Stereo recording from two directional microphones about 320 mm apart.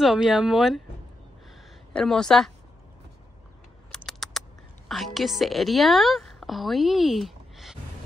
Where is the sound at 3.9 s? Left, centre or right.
Centre.